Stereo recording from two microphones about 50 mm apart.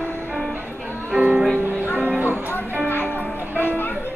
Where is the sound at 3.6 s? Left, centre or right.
Left.